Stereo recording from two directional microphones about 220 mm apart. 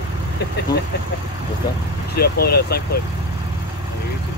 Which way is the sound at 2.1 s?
45° left (ahead or behind).